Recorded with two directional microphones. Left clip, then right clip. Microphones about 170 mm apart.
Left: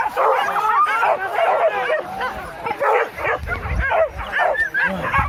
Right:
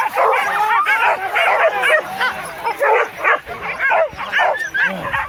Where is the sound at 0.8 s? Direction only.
45° left (ahead or behind).